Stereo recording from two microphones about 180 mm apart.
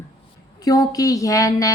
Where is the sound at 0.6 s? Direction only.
20° left (ahead or behind).